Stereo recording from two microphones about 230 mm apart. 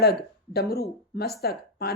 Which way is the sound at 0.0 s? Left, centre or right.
Left.